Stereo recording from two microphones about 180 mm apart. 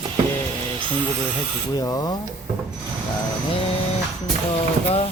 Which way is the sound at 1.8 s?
20° left (ahead or behind).